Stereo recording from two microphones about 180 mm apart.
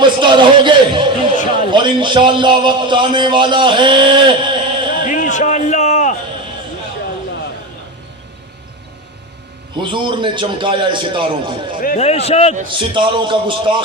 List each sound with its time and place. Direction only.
0.0 s a man's voice: 25° right (ahead or behind)
5.0 s a sound: 45° left (ahead or behind)
9.8 s a man's voice: 25° right (ahead or behind)
11.9 s a man's voice: 35° left (ahead or behind)
12.6 s a man's voice: 25° right (ahead or behind)